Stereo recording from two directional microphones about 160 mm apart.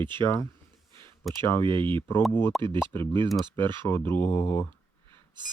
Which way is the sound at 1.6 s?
30° right (ahead or behind).